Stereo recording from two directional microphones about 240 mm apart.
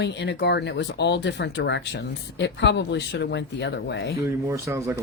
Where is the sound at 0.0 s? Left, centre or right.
Left.